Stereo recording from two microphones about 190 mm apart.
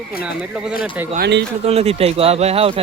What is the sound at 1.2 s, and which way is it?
Speech, 65° right (ahead or behind).